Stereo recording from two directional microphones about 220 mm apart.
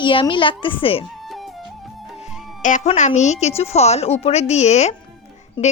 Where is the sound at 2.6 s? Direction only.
35° left (ahead or behind).